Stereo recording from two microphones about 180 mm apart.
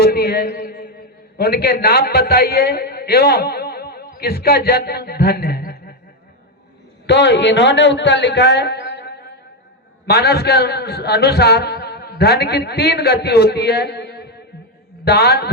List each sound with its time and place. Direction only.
0.0 s a man's voice: 60° left (ahead or behind)
7.1 s a man's voice: 75° left (ahead or behind)